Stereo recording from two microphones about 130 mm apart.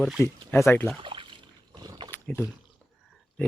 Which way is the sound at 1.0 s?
40° right (ahead or behind).